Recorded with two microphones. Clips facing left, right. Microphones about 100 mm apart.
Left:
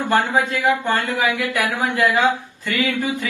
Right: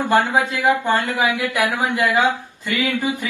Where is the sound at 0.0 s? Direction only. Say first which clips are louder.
Right 1 dB; 20° right (ahead or behind).